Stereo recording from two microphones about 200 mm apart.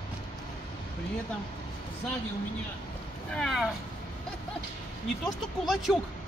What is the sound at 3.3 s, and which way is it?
Speech, centre (ahead or behind).